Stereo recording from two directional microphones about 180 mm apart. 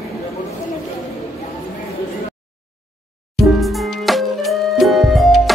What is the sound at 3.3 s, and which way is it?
Music, centre (ahead or behind).